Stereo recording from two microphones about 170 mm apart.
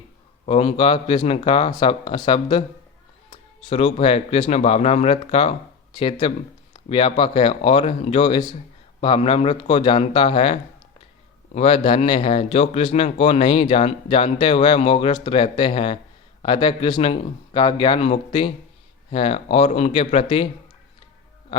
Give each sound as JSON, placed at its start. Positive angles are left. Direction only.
{"t": 0.4, "sound": "speech", "side_deg": 35}